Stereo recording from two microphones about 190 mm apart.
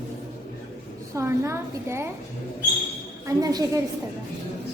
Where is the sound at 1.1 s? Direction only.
15° right (ahead or behind).